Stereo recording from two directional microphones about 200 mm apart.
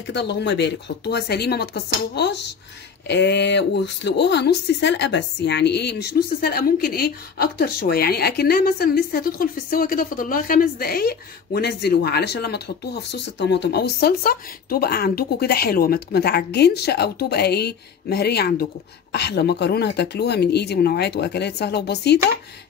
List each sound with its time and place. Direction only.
0.0 s speech: 60° left (ahead or behind)